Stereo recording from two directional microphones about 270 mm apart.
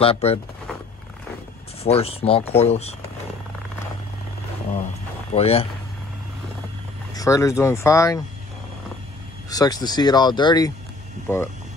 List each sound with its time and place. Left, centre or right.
0.0 s speech: left
1.8 s speech: left
5.3 s speech: left
7.2 s speech: centre
9.5 s speech: centre